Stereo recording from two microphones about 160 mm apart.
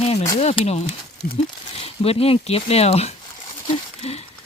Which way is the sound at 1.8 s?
40° left (ahead or behind).